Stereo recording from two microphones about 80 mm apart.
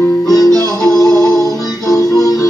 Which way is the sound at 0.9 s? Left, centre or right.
Left.